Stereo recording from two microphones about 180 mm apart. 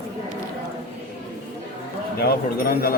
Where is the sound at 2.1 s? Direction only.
60° left (ahead or behind).